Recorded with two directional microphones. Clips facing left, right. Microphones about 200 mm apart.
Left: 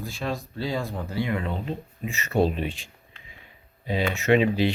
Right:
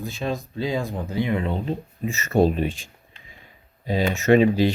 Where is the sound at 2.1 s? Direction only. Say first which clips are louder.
Right 4 dB; 45° right (ahead or behind).